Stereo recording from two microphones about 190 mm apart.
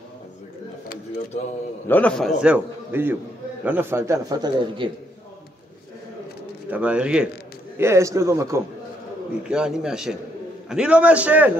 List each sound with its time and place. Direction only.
1.9 s a man's voice: 5° left (ahead or behind); by 4.9 s 25° right (ahead or behind)
6.7 s a man's voice: 5° right (ahead or behind)
9.5 s a man's voice: 5° right (ahead or behind)